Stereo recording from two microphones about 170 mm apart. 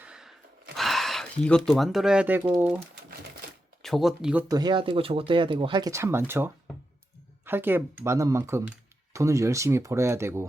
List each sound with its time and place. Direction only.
0.0 s gasp: 5° right (ahead or behind)
0.8 s speech: centre (ahead or behind)
3.8 s speech: centre (ahead or behind)
4.4 s speech: 25° right (ahead or behind)